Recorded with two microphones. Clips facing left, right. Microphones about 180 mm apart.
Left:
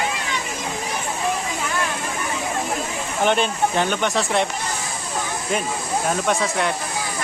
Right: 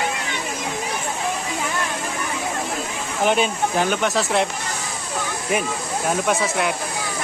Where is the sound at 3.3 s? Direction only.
5° right (ahead or behind).